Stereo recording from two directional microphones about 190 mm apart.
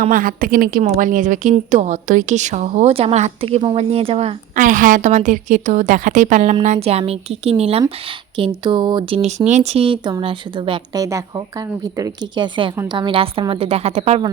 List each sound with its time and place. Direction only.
0.0 s a woman's voice: 45° right (ahead or behind)